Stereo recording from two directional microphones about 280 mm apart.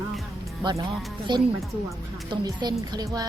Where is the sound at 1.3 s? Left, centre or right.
Centre.